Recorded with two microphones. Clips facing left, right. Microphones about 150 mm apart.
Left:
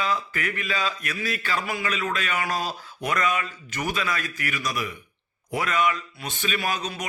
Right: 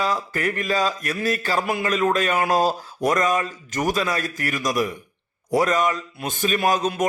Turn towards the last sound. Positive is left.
turn(degrees=-45)  # may be behind; listen again after turning